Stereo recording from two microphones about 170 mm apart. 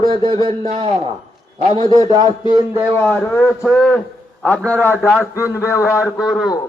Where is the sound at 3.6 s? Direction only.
5° left (ahead or behind).